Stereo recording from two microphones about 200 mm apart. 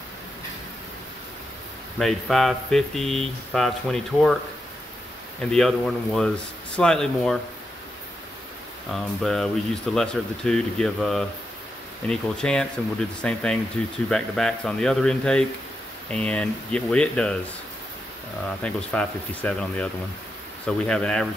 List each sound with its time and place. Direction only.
2.0 s speech: centre (ahead or behind)
5.4 s speech: 5° left (ahead or behind)
8.9 s speech: centre (ahead or behind)
18.6 s speech: 5° left (ahead or behind)